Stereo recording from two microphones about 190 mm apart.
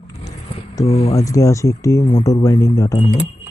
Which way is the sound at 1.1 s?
15° left (ahead or behind).